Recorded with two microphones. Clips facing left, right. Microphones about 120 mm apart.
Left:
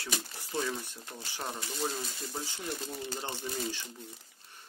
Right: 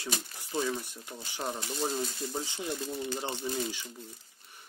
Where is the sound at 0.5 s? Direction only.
15° right (ahead or behind).